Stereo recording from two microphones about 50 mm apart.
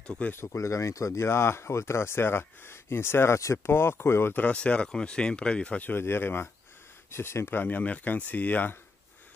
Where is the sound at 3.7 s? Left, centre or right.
Left.